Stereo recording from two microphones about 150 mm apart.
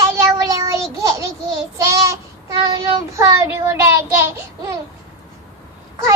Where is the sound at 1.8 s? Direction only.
20° right (ahead or behind).